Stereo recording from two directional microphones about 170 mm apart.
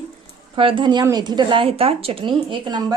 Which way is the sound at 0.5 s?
30° right (ahead or behind).